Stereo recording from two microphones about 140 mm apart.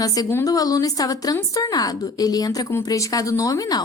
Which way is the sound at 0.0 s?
25° left (ahead or behind).